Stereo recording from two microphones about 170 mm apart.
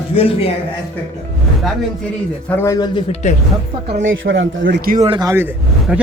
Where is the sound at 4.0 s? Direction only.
90° right.